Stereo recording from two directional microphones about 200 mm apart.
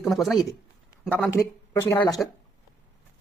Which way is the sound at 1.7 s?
15° left (ahead or behind).